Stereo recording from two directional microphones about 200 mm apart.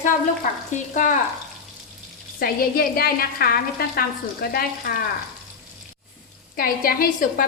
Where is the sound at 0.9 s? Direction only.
40° left (ahead or behind).